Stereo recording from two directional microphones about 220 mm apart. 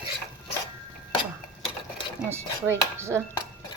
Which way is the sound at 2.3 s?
10° right (ahead or behind).